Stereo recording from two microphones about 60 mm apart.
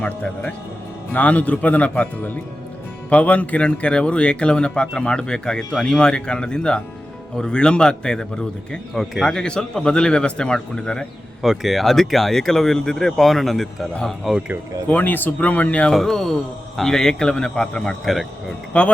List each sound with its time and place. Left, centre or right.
0.0 s speech: centre
11.4 s speech: centre
14.8 s speech: left
15.9 s speech: centre
18.0 s speech: centre
18.7 s speech: centre